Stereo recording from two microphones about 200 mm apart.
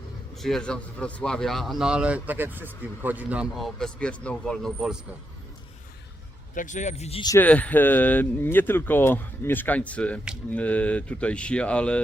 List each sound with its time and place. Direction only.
0.3 s speech: centre (ahead or behind)
6.5 s a man's voice: 40° left (ahead or behind)
7.3 s speech: 10° left (ahead or behind)